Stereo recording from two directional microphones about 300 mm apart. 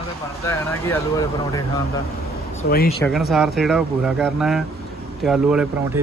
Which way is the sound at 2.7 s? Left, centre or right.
Left.